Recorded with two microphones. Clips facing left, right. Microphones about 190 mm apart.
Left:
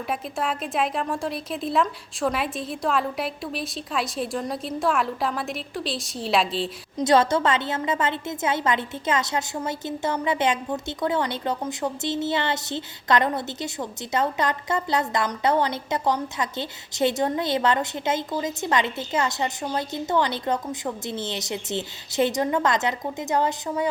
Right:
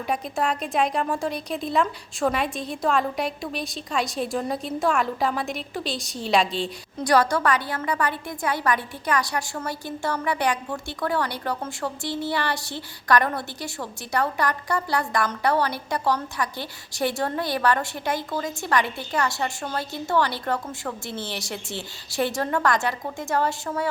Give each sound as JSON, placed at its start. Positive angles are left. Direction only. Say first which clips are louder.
{"t": 0.1, "sound": "a woman's voice", "louder": "right 3 dB", "side_deg": 0}
{"t": 6.9, "sound": "a woman's voice", "louder": "left 2 dB", "side_deg": 25}